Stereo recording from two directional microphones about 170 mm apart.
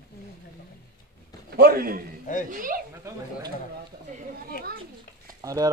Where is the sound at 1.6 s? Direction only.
60° right (ahead or behind).